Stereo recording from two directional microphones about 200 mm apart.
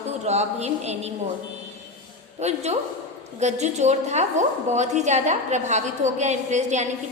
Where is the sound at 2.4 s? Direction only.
35° right (ahead or behind).